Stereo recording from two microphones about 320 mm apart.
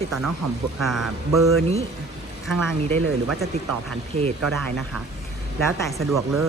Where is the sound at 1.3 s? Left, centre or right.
Right.